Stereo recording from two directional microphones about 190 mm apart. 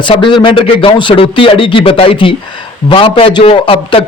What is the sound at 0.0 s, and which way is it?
A man's voice, 25° left (ahead or behind).